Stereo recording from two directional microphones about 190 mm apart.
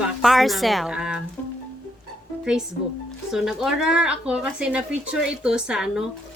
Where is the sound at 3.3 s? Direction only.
Centre (ahead or behind).